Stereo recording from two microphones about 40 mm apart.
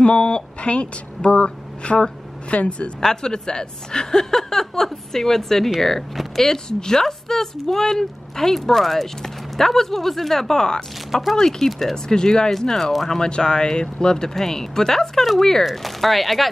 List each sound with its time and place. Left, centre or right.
0.0 s a woman's voice: left
3.0 s a woman's voice: centre
13.2 s speech: centre